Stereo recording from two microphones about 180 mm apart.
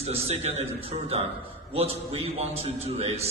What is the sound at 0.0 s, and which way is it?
A man's voice, 35° right (ahead or behind).